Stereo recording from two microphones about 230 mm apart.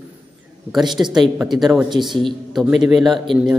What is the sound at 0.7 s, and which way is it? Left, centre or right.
A man's voice, centre.